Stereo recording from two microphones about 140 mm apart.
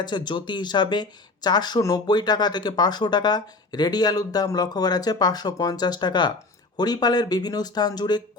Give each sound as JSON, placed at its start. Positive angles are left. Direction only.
{"t": 0.0, "sound": "speech", "side_deg": 30}